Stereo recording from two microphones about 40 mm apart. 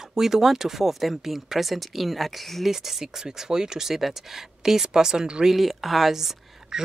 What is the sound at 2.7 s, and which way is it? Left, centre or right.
Speech, centre.